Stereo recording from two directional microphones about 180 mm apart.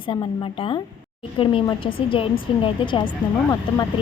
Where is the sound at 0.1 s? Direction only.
25° left (ahead or behind).